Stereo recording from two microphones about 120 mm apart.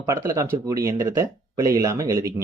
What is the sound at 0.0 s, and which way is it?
Speech, 25° right (ahead or behind).